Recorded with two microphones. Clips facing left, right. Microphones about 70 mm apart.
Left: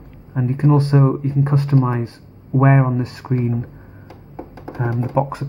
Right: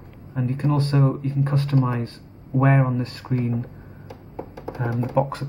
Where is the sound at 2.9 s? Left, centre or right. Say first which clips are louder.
Left 4 dB; centre.